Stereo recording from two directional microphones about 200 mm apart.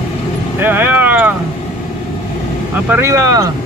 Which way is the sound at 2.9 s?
15° right (ahead or behind).